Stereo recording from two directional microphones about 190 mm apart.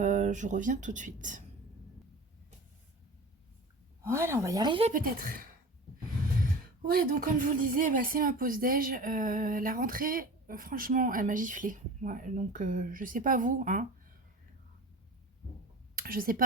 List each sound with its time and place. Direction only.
0.0 s speech: 40° right (ahead or behind)
4.0 s speech: 15° right (ahead or behind)
4.9 s speech: 45° right (ahead or behind)
6.8 s speech: 50° right (ahead or behind)
16.0 s speech: 50° right (ahead or behind)